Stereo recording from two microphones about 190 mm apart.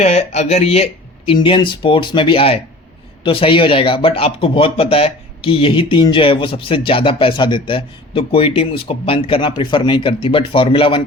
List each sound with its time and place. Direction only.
0.0 s speech: 35° left (ahead or behind)